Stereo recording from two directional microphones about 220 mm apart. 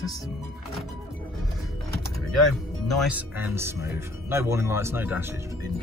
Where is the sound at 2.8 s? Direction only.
5° right (ahead or behind).